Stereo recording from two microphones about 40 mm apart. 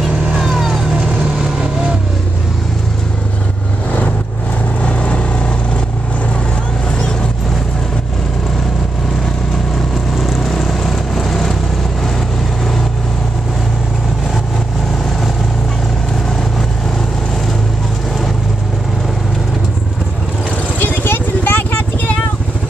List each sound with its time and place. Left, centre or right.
0.4 s vehicle: centre
4.8 s vehicle: left
10.1 s vehicle: centre
20.8 s vehicle: left